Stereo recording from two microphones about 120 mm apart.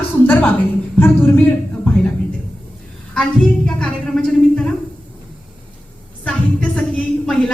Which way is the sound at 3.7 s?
5° left (ahead or behind).